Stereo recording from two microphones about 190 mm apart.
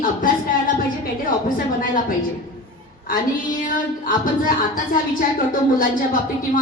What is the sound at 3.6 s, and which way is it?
A woman's voice, 45° left (ahead or behind).